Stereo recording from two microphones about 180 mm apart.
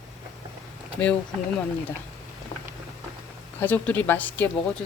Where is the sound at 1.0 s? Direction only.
10° left (ahead or behind).